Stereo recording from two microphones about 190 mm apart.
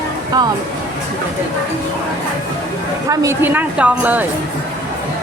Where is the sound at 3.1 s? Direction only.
15° right (ahead or behind).